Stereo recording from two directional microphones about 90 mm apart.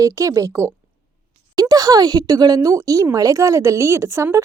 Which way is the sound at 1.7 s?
45° right (ahead or behind).